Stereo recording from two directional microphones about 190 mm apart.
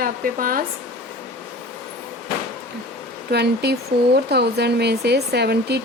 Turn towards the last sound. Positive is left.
turn(degrees=-60)  # may be behind; listen again after turning